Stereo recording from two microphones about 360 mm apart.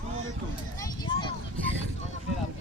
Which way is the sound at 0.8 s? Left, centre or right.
Centre.